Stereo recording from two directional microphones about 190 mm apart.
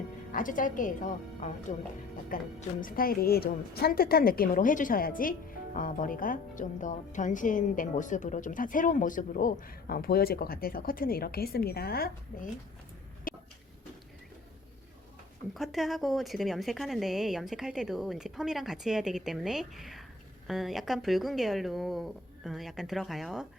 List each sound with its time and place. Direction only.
0.3 s a woman's voice: 45° left (ahead or behind)
13.3 s a sound: 45° left (ahead or behind)
15.5 s a woman's voice: centre (ahead or behind)